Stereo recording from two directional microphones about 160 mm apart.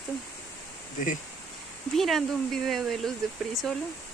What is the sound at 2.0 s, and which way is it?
Speech, centre (ahead or behind).